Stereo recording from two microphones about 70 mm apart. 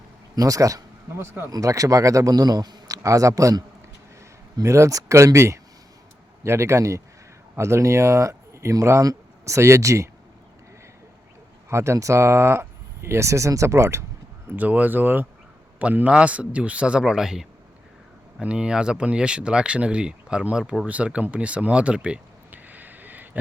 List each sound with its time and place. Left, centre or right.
0.3 s speech: right
1.1 s speech: right
1.5 s speech: right
2.3 s speech: right
2.9 s a man's voice: right
4.6 s speech: right
11.7 s speech: right
14.5 s speech: right
20.8 s a sound: centre